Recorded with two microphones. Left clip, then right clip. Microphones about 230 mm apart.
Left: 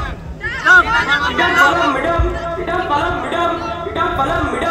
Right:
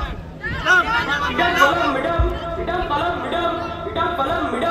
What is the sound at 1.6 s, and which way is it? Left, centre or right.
Music, left.